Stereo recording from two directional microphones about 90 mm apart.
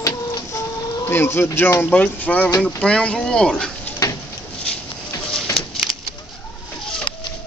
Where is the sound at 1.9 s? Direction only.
15° left (ahead or behind).